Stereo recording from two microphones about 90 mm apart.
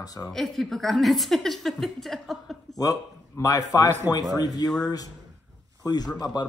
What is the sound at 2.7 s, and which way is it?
A man's voice, 40° left (ahead or behind).